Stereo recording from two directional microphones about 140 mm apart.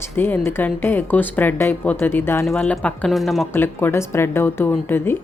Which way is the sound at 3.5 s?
15° left (ahead or behind).